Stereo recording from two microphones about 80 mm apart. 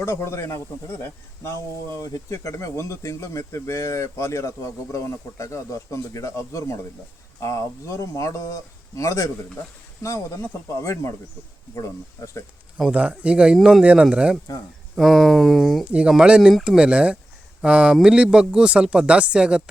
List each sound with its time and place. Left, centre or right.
0.0 s speech: left
2.0 s speech: left
12.7 s speech: centre
14.9 s speech: centre
15.8 s speech: centre